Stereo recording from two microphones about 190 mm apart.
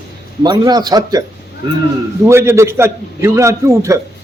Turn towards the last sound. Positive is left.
turn(degrees=-15)  # may be behind; listen again after turning